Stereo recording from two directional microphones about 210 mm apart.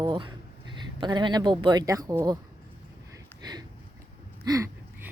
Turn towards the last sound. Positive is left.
turn(degrees=-15)  # may be behind; listen again after turning